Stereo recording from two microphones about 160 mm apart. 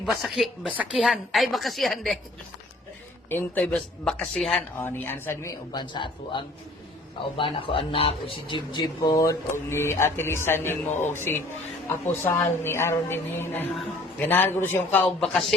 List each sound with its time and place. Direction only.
0.0 s a woman's voice: centre (ahead or behind)
3.2 s speech: 10° left (ahead or behind)
5.8 s speech: 30° left (ahead or behind); by 15.0 s 15° left (ahead or behind)
15.0 s a woman's voice: centre (ahead or behind)